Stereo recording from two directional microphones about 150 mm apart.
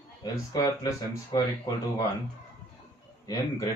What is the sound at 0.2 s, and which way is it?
Speech, 25° left (ahead or behind).